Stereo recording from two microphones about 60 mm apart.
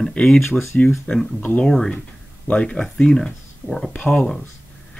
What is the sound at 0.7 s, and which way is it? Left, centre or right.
Speech, centre.